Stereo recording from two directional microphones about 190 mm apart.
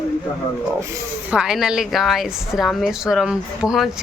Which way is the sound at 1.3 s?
5° right (ahead or behind).